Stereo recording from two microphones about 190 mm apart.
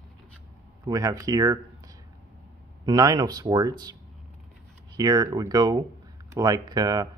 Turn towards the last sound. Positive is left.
turn(degrees=-20)  # may be behind; listen again after turning